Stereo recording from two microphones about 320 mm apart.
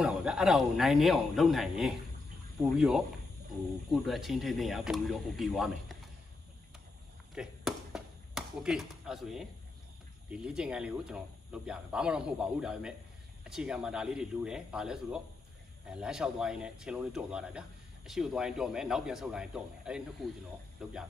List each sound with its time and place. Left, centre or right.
0.0 s speech: centre
7.3 s basketball bounce: centre
10.3 s speech: centre